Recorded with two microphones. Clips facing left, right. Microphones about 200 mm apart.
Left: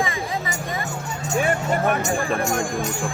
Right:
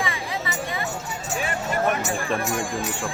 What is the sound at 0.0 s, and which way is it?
Music, 45° left (ahead or behind).